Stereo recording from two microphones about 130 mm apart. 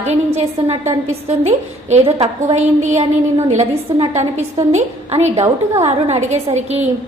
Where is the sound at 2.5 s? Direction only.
65° right (ahead or behind).